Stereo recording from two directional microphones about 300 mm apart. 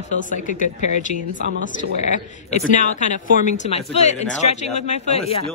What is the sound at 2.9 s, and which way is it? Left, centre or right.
A woman's voice, left.